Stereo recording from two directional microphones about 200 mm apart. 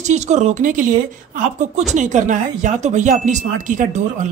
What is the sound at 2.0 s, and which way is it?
Speech, 40° right (ahead or behind).